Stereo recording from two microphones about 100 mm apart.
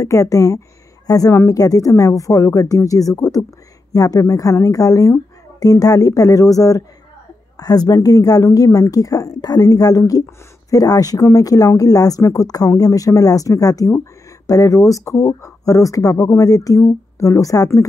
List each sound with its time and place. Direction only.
0.0 s speech: 35° left (ahead or behind)